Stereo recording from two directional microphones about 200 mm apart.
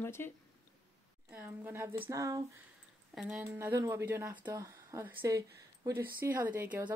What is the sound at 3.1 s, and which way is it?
Speech, 5° right (ahead or behind).